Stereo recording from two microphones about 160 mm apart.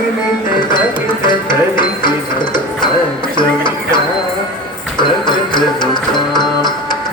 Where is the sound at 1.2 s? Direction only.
30° left (ahead or behind).